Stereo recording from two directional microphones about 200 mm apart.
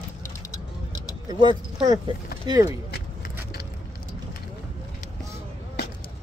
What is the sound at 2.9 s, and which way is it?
Keys jangling, 50° left (ahead or behind).